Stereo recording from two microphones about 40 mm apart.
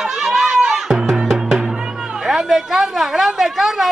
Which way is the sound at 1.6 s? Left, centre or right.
Centre.